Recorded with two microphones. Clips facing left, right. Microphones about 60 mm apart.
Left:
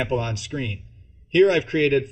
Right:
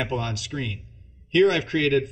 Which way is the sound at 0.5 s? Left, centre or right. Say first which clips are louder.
Left 3 dB; centre.